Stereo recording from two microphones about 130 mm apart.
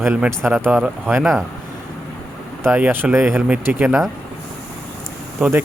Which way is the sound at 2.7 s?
15° right (ahead or behind).